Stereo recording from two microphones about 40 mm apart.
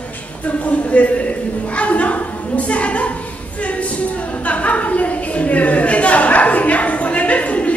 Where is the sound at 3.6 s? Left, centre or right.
Left.